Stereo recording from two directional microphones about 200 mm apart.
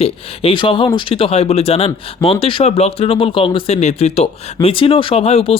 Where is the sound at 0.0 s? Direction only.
25° left (ahead or behind).